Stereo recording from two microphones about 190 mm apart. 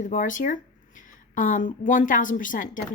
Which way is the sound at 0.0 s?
45° left (ahead or behind).